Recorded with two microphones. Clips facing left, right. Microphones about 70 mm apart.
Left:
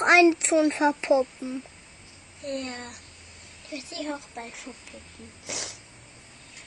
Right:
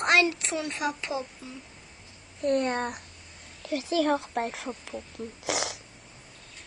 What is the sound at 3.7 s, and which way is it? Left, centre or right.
Speech, right.